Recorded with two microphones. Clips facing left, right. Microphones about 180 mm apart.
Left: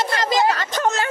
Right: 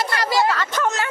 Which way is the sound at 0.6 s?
30° left (ahead or behind).